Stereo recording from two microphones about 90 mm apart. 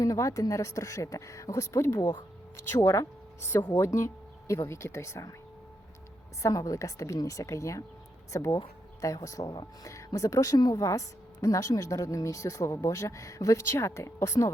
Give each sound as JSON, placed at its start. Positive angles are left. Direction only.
{"t": 0.0, "sound": "a woman's voice", "side_deg": 35}
{"t": 6.4, "sound": "a woman's voice", "side_deg": 35}